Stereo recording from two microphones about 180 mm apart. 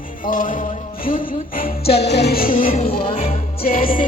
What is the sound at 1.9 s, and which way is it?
Music, 65° left (ahead or behind).